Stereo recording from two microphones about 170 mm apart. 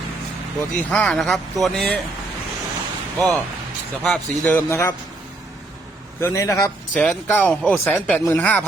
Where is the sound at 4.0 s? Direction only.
Centre (ahead or behind).